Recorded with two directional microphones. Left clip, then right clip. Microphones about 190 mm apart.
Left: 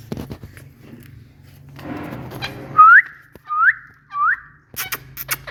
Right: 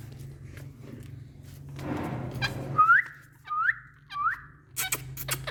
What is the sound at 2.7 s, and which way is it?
Whistling, 5° left (ahead or behind).